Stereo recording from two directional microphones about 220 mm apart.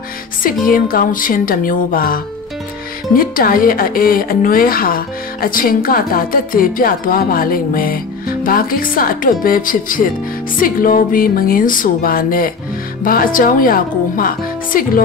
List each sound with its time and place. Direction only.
0.7 s a woman's voice: 40° left (ahead or behind)